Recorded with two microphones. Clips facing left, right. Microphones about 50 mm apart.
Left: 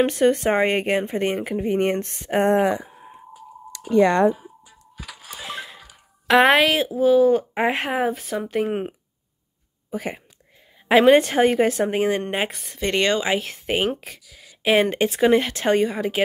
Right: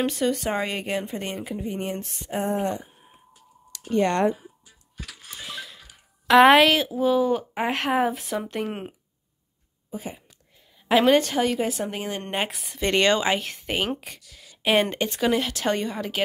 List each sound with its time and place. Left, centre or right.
0.0 s speech: left
4.6 s music: centre
5.5 s music: left
6.4 s speech: centre
7.5 s speech: left
7.9 s speech: centre
8.6 s speech: centre
9.8 s speech: left
10.9 s a woman's voice: left
12.2 s speech: centre
14.9 s speech: centre
15.7 s speech: centre